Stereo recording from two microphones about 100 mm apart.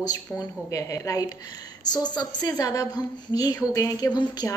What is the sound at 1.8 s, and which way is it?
A woman's voice, 45° left (ahead or behind).